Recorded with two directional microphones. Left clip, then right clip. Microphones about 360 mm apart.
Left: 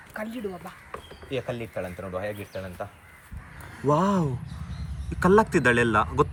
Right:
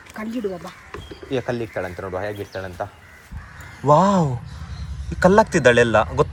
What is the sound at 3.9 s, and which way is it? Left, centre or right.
Speech, centre.